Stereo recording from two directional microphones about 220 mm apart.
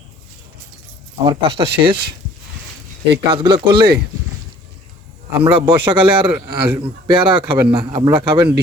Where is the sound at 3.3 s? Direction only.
20° right (ahead or behind).